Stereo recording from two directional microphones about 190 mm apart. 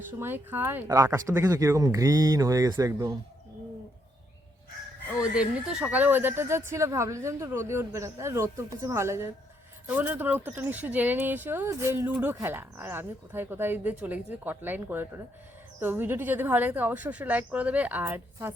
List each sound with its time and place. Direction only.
0.2 s speech: 10° right (ahead or behind)
5.2 s speech: 5° right (ahead or behind)